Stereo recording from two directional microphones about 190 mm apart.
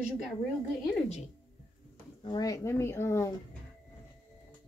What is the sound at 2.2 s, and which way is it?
Speech, 20° left (ahead or behind).